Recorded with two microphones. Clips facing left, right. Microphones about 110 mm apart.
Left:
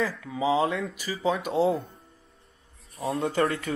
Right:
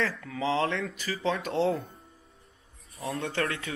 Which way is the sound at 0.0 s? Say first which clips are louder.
Left 3 dB; 5° left (ahead or behind).